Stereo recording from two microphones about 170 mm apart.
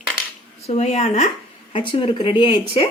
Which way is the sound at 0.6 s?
40° left (ahead or behind).